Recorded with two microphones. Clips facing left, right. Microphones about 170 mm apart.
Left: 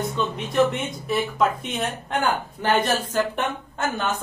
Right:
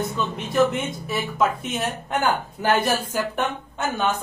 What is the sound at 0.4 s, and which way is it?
A woman's voice, centre (ahead or behind).